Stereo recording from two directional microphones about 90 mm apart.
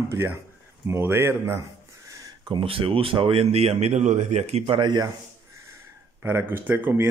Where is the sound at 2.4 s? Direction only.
75° right (ahead or behind).